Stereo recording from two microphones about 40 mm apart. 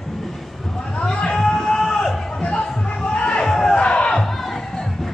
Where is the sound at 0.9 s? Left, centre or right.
Left.